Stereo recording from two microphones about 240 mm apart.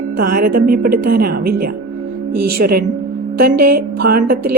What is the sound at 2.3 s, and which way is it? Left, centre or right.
Speech, right.